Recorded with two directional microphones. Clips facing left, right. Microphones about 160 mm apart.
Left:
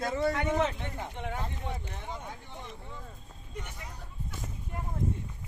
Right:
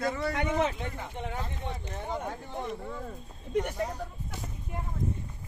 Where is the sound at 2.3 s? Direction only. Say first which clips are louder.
Right 8 dB; 55° right (ahead or behind).